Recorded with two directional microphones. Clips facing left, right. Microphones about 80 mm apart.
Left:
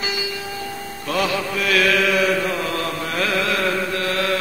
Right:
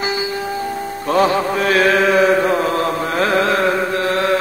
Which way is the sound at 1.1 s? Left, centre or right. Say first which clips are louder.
Right 7 dB; right.